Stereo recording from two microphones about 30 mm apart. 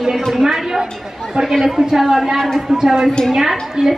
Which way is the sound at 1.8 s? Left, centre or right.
Centre.